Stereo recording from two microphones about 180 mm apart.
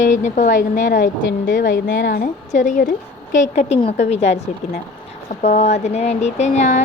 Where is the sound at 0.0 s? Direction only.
45° left (ahead or behind).